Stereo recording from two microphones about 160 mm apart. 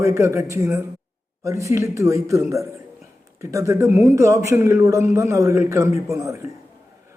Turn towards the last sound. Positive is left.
turn(degrees=-20)  # may be behind; listen again after turning